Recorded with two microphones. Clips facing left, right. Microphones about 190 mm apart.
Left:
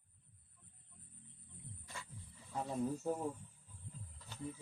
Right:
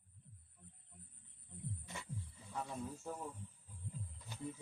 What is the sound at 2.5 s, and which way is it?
Speech, 35° left (ahead or behind).